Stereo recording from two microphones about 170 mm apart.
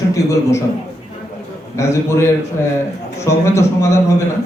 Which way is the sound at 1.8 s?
15° left (ahead or behind).